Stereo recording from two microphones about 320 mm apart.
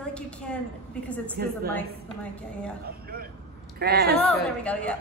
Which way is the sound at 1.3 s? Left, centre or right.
Right.